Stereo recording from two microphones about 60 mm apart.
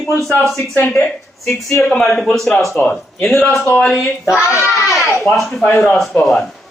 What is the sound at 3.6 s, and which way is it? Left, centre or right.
Speech, left.